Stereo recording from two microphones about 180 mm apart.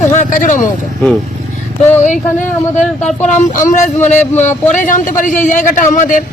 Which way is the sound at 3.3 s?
40° left (ahead or behind).